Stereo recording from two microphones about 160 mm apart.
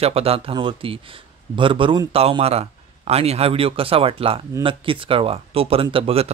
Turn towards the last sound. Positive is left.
turn(degrees=-40)  # may be behind; listen again after turning